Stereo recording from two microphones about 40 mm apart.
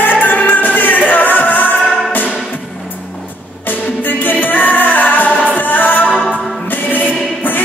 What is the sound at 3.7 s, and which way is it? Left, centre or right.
Music, left.